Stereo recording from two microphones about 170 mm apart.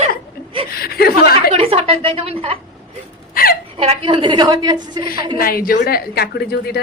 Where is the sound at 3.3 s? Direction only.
60° left (ahead or behind).